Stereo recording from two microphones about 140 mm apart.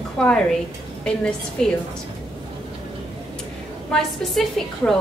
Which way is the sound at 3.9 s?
5° left (ahead or behind).